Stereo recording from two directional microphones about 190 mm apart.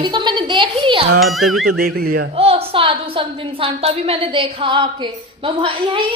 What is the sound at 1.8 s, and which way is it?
Speech, 55° right (ahead or behind).